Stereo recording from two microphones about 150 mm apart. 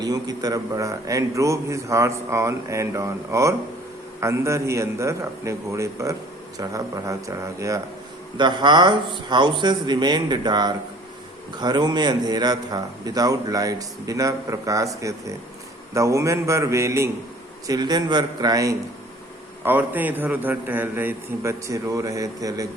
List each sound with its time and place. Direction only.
0.0 s a man's voice: 25° right (ahead or behind)
19.6 s a man's voice: 10° right (ahead or behind)